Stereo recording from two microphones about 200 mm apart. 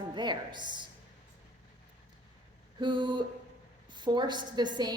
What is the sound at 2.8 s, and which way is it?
A woman's voice, 25° right (ahead or behind).